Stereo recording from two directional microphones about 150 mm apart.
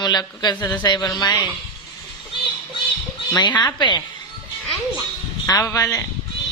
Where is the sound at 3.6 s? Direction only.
30° left (ahead or behind).